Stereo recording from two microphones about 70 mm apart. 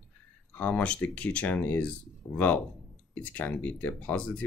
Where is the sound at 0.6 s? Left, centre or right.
Left.